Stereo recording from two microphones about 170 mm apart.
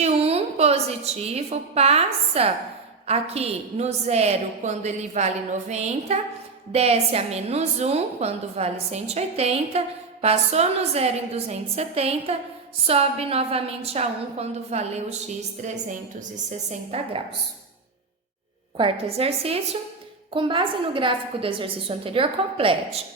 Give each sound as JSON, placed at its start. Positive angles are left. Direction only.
{"t": 0.0, "sound": "a woman's voice", "side_deg": -35}
{"t": 18.8, "sound": "a woman's voice", "side_deg": -35}